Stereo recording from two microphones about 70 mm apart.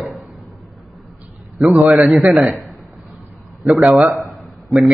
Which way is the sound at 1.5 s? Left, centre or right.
Centre.